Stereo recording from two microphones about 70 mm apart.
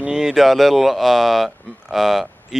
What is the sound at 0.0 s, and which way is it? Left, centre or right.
Speech, centre.